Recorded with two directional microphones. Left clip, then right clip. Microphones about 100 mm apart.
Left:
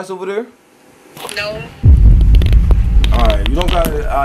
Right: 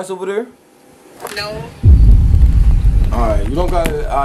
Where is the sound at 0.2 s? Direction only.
Centre (ahead or behind).